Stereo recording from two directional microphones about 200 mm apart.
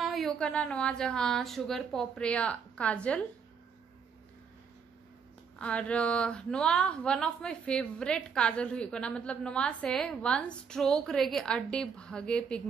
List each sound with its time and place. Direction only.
0.0 s a woman's voice: centre (ahead or behind)
5.6 s a woman's voice: 5° left (ahead or behind)